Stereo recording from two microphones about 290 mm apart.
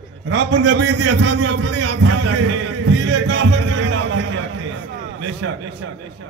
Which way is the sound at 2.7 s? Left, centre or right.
Right.